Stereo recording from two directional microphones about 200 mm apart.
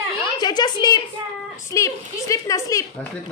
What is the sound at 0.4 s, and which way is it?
A woman's voice, 20° left (ahead or behind).